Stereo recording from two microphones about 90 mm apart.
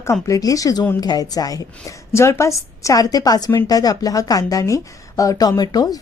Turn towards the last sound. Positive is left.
turn(degrees=45)  # may be behind; listen again after turning